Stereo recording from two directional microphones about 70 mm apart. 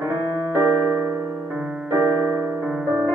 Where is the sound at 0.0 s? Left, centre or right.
Right.